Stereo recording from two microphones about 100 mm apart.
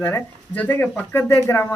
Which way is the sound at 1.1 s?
30° left (ahead or behind).